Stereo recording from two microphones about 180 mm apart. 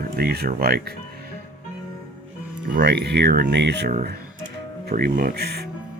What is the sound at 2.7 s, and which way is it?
Speech, 65° right (ahead or behind).